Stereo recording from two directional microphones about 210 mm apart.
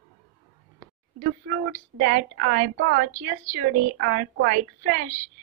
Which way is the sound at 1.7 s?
45° right (ahead or behind).